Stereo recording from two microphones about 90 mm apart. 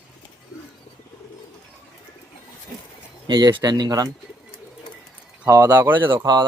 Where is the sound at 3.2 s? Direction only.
55° right (ahead or behind).